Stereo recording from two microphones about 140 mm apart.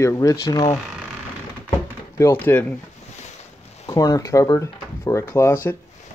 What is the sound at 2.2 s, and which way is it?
Speech, 15° left (ahead or behind).